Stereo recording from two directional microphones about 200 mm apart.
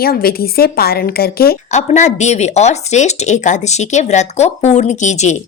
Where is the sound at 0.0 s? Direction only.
50° left (ahead or behind).